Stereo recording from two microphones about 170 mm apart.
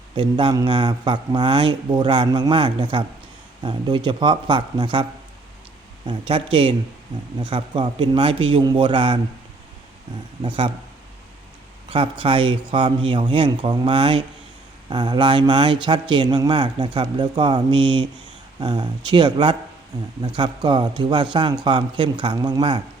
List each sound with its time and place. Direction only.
0.2 s speech: 25° right (ahead or behind)
6.1 s speech: 30° right (ahead or behind)
10.4 s speech: 30° right (ahead or behind)
12.2 s speech: 30° right (ahead or behind)